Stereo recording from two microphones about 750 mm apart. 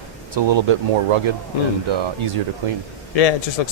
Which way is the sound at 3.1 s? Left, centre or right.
Left.